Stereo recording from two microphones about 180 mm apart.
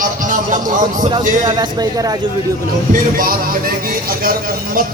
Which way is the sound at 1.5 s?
25° right (ahead or behind).